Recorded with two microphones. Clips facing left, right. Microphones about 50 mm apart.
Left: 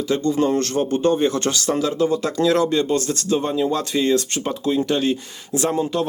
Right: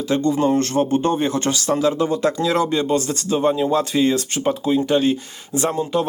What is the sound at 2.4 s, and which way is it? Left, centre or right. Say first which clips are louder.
Speech: left 1 dB; centre.